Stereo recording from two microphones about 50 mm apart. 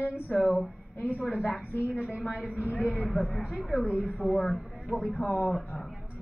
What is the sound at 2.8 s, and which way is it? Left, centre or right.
A woman's voice, centre.